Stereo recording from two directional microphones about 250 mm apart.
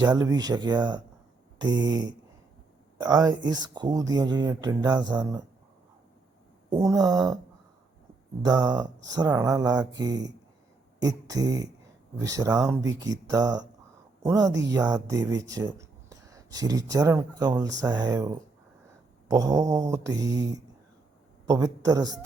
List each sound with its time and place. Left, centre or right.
0.0 s speech: centre
6.7 s speech: centre
8.4 s a man's voice: centre